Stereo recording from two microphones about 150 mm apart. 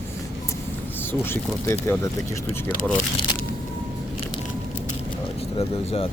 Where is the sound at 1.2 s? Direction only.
15° left (ahead or behind).